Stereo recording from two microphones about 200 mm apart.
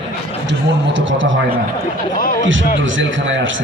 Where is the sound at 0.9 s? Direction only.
70° right (ahead or behind).